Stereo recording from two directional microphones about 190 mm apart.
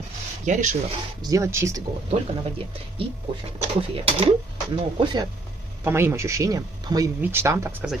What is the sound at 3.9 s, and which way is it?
Speech, 30° right (ahead or behind).